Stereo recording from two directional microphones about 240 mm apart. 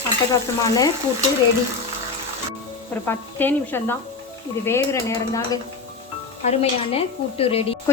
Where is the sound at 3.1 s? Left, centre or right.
Centre.